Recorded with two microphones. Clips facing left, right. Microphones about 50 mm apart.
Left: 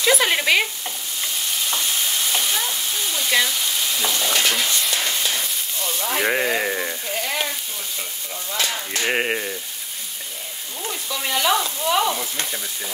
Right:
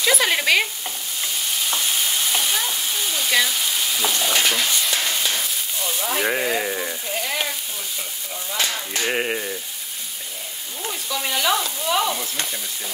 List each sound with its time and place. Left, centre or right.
0.0 s stir: centre
1.7 s frying: centre
6.2 s speech: centre
7.1 s sizzle: centre
9.0 s speech: centre
10.8 s sizzle: centre